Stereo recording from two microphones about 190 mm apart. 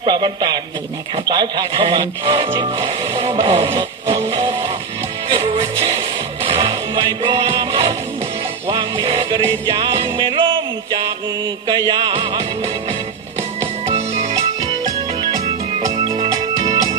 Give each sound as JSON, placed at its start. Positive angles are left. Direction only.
{"t": 0.0, "sound": "music", "side_deg": -25}
{"t": 1.1, "sound": "speech", "side_deg": -20}
{"t": 5.3, "sound": "music", "side_deg": -30}
{"t": 13.8, "sound": "music", "side_deg": -35}
{"t": 16.2, "sound": "music", "side_deg": -20}